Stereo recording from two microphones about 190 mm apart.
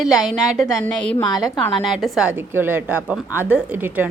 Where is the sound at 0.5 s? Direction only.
Centre (ahead or behind).